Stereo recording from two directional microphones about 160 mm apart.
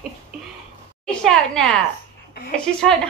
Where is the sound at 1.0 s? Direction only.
5° left (ahead or behind).